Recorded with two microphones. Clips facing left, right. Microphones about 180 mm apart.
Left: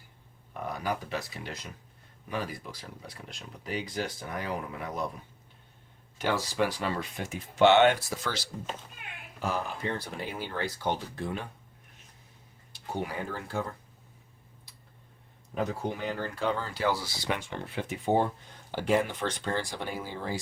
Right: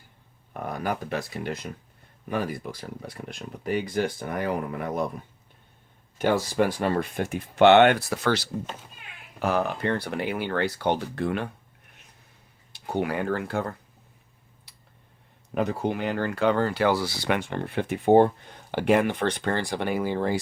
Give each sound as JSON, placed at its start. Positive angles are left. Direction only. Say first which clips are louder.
{"t": 0.6, "sound": "speech", "louder": "right 3 dB", "side_deg": -55}
{"t": 6.1, "sound": "speech", "louder": "right 6 dB", "side_deg": -50}
{"t": 12.7, "sound": "speech", "louder": "right 7 dB", "side_deg": -70}
{"t": 15.5, "sound": "speech", "louder": "right 6 dB", "side_deg": -70}